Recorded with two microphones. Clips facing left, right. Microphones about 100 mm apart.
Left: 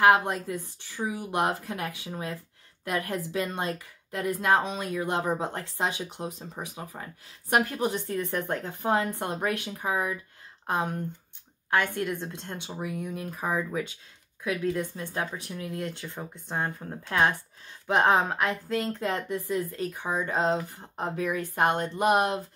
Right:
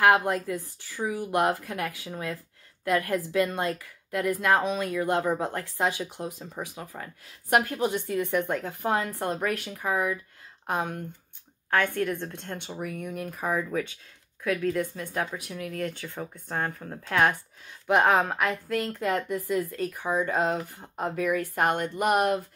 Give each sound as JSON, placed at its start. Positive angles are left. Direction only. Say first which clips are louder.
{"t": 0.0, "sound": "speech", "louder": "even", "side_deg": 20}
{"t": 8.9, "sound": "speech", "louder": "left 1 dB", "side_deg": 25}
{"t": 16.2, "sound": "speech", "louder": "right 1 dB", "side_deg": 15}